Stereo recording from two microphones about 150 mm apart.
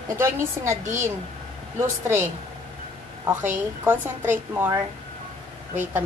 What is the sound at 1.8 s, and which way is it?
Speech, 15° right (ahead or behind).